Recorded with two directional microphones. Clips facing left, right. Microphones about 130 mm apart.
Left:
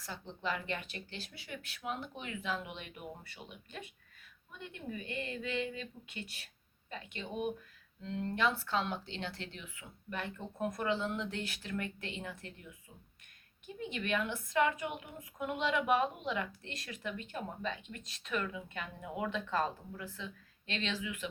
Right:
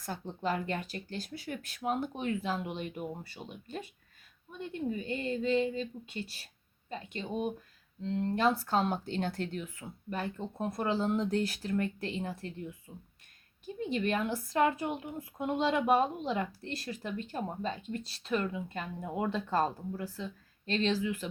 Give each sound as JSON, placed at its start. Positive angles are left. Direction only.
{"t": 0.0, "sound": "a woman's voice", "side_deg": -45}
{"t": 13.7, "sound": "a woman's voice", "side_deg": -35}